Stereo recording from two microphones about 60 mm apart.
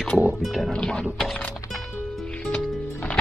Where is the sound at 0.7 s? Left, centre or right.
Centre.